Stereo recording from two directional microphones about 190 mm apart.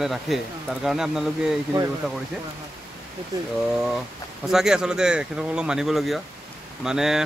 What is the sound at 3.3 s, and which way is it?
Speech, 20° right (ahead or behind).